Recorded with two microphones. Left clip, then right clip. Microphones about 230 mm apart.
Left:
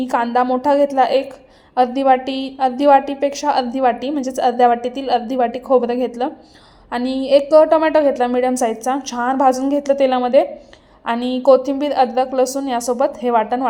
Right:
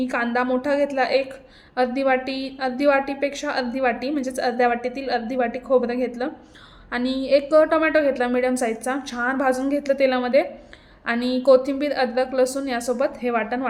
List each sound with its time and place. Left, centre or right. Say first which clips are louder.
0.0 s a woman's voice: left 6 dB; centre
4.7 s a woman's voice: left 6 dB; left
5.0 s a woman's voice: left 7 dB; centre